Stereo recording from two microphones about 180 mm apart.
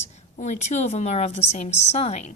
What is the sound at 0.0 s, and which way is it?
A woman's voice, 40° left (ahead or behind).